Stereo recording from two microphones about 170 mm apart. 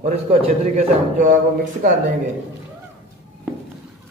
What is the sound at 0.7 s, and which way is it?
A man's voice, 50° right (ahead or behind).